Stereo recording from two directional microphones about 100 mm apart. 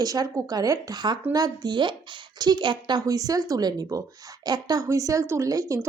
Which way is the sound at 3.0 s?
35° right (ahead or behind).